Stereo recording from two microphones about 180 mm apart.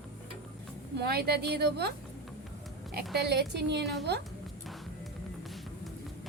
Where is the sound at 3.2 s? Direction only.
65° right (ahead or behind).